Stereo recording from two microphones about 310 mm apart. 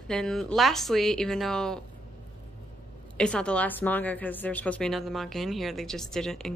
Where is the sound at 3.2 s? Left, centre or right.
Centre.